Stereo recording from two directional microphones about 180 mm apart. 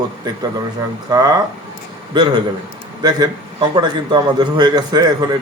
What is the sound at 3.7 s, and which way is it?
Speech, 25° right (ahead or behind).